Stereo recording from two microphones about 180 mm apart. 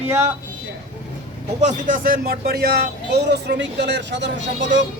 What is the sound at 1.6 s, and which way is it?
Speech, 50° right (ahead or behind).